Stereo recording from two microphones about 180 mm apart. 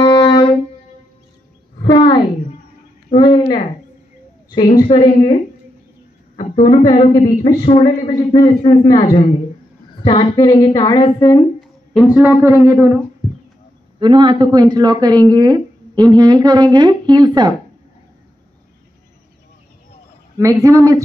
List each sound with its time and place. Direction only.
0.0 s music: 25° left (ahead or behind)
1.8 s a sound: 25° left (ahead or behind)
4.7 s a woman's voice: 25° left (ahead or behind)
6.6 s a woman's voice: 25° left (ahead or behind)
11.9 s a woman's voice: 5° right (ahead or behind)
13.9 s speech: 25° right (ahead or behind)
20.3 s a woman's voice: 15° right (ahead or behind)